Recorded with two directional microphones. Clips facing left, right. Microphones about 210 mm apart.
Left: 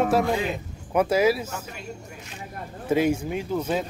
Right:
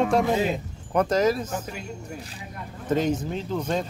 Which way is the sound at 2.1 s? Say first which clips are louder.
Right 3 dB; 35° right (ahead or behind).